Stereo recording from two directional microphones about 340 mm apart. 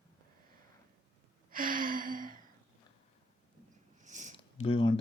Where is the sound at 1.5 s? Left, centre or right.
Right.